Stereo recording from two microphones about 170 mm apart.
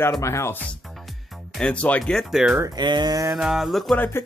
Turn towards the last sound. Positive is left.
turn(degrees=10)  # may be behind; listen again after turning